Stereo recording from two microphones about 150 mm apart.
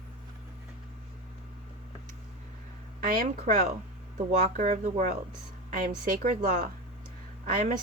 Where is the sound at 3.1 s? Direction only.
65° right (ahead or behind).